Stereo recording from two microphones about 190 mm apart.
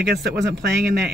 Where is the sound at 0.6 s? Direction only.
60° right (ahead or behind).